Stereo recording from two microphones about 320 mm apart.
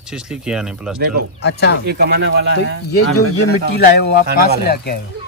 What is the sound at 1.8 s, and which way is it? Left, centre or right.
Speech, right.